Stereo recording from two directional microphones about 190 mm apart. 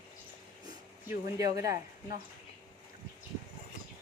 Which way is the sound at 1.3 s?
20° right (ahead or behind).